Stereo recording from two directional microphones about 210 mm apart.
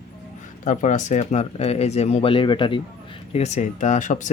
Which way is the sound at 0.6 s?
35° left (ahead or behind).